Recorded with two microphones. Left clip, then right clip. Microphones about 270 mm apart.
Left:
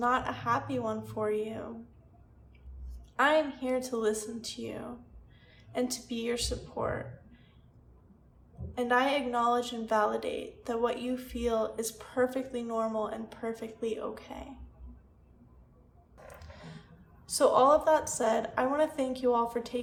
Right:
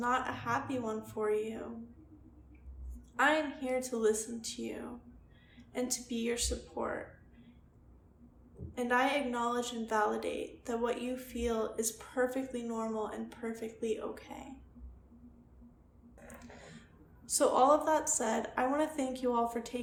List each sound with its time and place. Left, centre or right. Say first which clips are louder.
0.0 s a woman's voice: left 4 dB; centre
3.2 s a woman's voice: left 4 dB; centre
8.7 s a woman's voice: left 3 dB; centre
16.2 s a sound: left 2 dB; centre
17.2 s a woman's voice: left 3 dB; centre